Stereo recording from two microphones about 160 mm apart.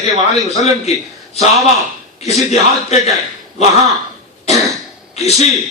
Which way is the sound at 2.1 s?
45° left (ahead or behind).